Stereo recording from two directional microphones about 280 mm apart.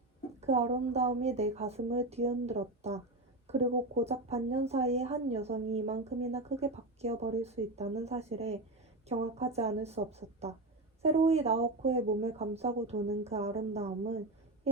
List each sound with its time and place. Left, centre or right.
0.3 s speech: right